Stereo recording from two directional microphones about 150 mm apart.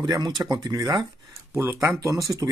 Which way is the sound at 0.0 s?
30° right (ahead or behind).